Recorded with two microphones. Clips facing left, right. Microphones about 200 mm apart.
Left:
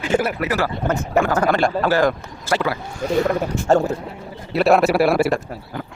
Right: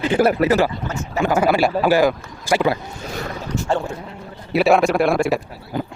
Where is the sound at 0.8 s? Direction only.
55° left (ahead or behind).